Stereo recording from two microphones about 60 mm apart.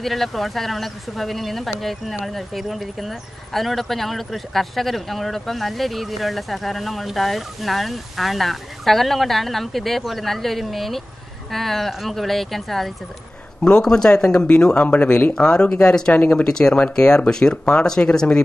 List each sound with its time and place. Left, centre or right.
0.0 s speech: centre
13.6 s a man's voice: centre
15.3 s speech: centre
16.2 s speech: left